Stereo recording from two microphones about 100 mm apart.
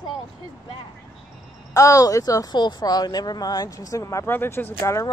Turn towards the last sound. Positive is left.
turn(degrees=30)  # may be behind; listen again after turning